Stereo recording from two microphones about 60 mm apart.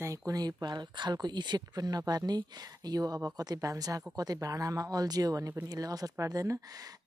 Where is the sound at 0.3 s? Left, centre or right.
Right.